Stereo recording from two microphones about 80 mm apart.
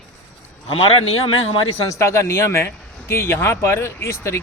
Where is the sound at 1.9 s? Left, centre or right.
Left.